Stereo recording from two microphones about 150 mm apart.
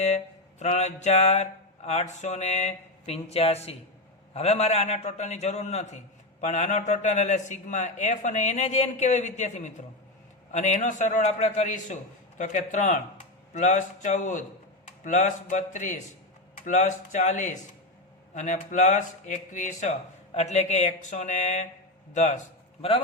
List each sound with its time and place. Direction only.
0.6 s a man's voice: 50° left (ahead or behind)
22.8 s a man's voice: 40° left (ahead or behind)